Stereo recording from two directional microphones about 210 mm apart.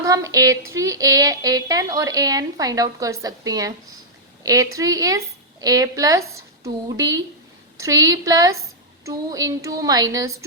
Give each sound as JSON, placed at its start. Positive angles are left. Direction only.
{"t": 0.0, "sound": "speech", "side_deg": -15}